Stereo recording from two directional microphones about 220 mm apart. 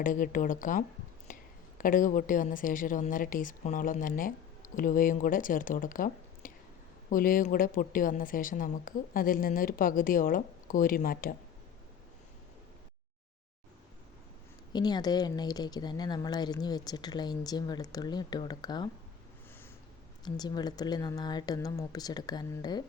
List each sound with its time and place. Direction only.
0.0 s a woman's voice: 40° left (ahead or behind)
1.3 s a sound: 35° left (ahead or behind)
1.8 s a woman's voice: 40° left (ahead or behind)
14.7 s speech: 20° left (ahead or behind)
20.2 s speech: 20° left (ahead or behind)